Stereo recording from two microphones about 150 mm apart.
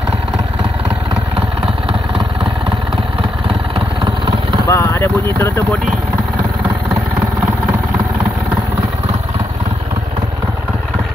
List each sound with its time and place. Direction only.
3.4 s vehicle: 40° right (ahead or behind)
4.6 s speech: 20° left (ahead or behind)